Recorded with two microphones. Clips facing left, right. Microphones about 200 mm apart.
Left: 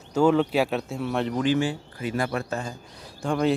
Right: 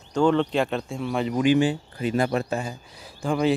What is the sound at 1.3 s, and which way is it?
Speech, 15° right (ahead or behind).